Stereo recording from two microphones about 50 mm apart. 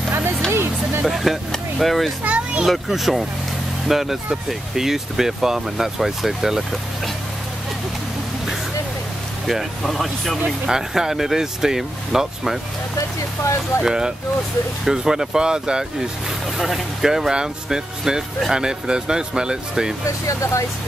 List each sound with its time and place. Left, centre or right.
0.5 s speech: right
1.0 s speech: centre
2.2 s speech: right
2.6 s speech: centre
9.5 s speech: centre
10.7 s speech: centre
13.8 s speech: centre
20.2 s speech: left